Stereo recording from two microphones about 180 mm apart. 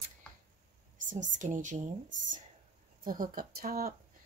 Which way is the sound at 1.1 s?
45° right (ahead or behind).